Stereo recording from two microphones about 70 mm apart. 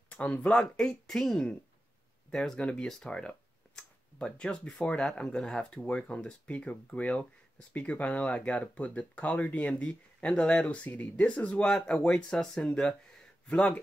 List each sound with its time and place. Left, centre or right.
0.1 s speech: centre